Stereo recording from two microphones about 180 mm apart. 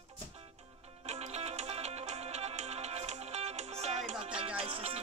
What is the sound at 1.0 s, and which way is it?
Music, 35° right (ahead or behind).